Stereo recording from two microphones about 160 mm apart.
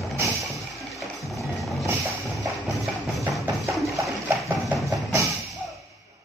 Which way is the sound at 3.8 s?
20° right (ahead or behind).